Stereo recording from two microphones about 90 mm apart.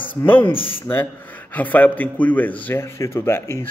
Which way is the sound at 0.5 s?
85° left.